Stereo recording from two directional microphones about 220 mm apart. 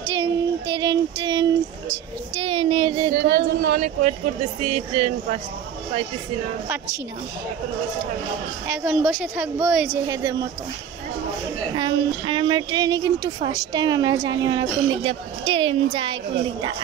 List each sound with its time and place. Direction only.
0.1 s child singing: 15° right (ahead or behind)
2.3 s a sound: 25° right (ahead or behind)
3.2 s a sound: 40° right (ahead or behind)
4.6 s a woman's voice: 30° right (ahead or behind)
8.6 s a woman's voice: 5° right (ahead or behind)
10.0 s speech: 15° right (ahead or behind)
11.7 s a woman's voice: 20° right (ahead or behind)